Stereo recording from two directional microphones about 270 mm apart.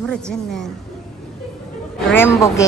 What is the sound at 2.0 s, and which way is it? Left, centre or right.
Speech, centre.